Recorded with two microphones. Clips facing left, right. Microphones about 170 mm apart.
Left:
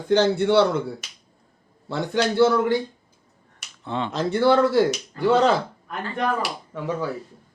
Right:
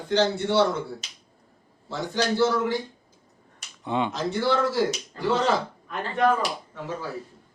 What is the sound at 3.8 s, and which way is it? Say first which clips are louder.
Speech: right 2 dB; 15° right (ahead or behind).